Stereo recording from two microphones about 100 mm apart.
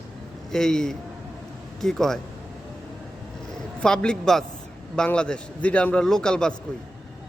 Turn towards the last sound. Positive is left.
turn(degrees=5)  # may be behind; listen again after turning